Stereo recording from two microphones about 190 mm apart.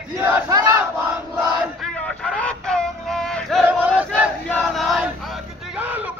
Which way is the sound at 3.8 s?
5° right (ahead or behind).